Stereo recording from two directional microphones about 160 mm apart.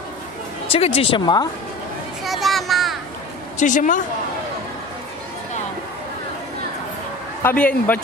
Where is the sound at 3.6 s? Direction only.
50° left (ahead or behind).